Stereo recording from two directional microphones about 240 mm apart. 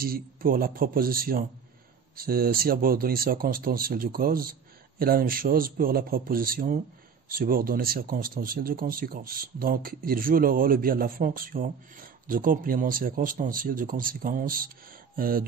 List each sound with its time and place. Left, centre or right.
0.0 s speech: right